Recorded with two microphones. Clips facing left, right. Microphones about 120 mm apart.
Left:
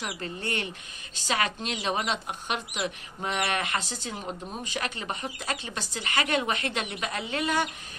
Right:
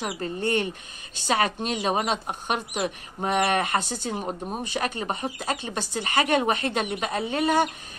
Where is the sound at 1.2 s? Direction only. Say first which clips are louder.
Right 5 dB; 45° right (ahead or behind).